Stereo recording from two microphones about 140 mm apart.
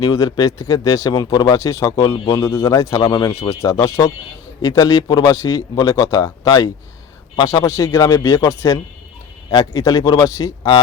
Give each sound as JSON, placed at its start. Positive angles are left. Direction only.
{"t": 0.0, "sound": "speech", "side_deg": 25}